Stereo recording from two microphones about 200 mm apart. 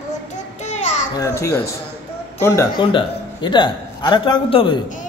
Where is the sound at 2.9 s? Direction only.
25° left (ahead or behind).